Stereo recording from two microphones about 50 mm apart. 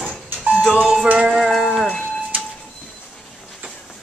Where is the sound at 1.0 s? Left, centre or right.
Right.